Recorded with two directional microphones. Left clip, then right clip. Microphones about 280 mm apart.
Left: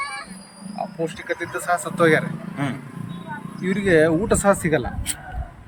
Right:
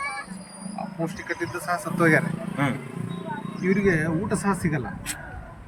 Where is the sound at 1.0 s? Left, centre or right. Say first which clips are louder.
Left 2 dB; centre.